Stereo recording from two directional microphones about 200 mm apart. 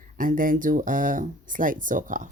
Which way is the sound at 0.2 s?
45° right (ahead or behind).